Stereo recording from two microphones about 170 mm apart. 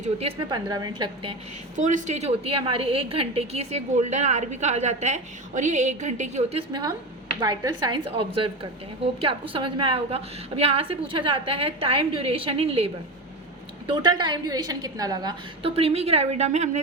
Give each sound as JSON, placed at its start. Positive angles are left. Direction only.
{"t": 0.0, "sound": "a woman's voice", "side_deg": -35}
{"t": 0.5, "sound": "a woman's voice", "side_deg": -25}
{"t": 1.7, "sound": "a woman's voice", "side_deg": -45}
{"t": 15.7, "sound": "a woman's voice", "side_deg": -35}